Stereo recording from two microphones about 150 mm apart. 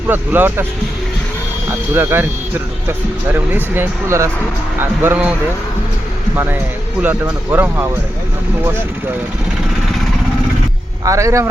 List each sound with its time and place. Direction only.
0.1 s speech: 15° right (ahead or behind)
1.9 s speech: 15° right (ahead or behind)
3.3 s speech: 15° right (ahead or behind)
6.3 s speech: 15° right (ahead or behind)
11.0 s speech: 20° right (ahead or behind)